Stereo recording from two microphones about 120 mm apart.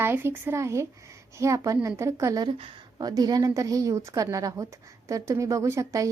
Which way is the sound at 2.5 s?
50° right (ahead or behind).